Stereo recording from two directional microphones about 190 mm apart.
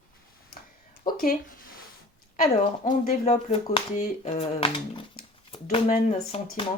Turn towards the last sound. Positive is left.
turn(degrees=35)  # may be behind; listen again after turning